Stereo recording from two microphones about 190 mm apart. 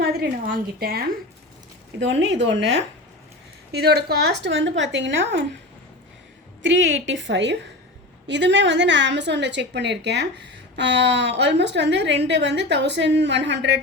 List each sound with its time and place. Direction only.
0.0 s a woman's voice: 55° right (ahead or behind)
2.0 s a woman's voice: 70° right (ahead or behind)
6.6 s a woman's voice: 75° right (ahead or behind)